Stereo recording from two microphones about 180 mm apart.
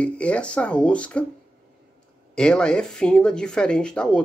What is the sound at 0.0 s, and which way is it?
Speech, 5° left (ahead or behind).